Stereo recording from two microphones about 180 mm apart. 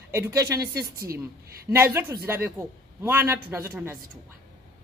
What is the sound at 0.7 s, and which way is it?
Speech, 60° right (ahead or behind).